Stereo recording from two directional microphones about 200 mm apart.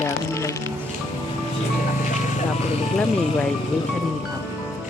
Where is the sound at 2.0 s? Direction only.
40° left (ahead or behind).